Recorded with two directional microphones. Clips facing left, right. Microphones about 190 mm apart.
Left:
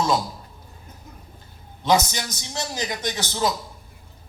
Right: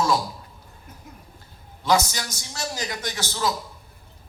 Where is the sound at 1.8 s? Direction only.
20° left (ahead or behind).